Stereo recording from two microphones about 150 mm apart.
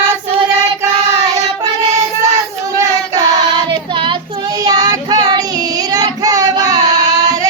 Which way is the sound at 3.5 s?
30° right (ahead or behind).